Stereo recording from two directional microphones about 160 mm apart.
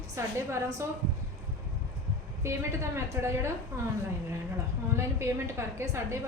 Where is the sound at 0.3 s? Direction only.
15° right (ahead or behind).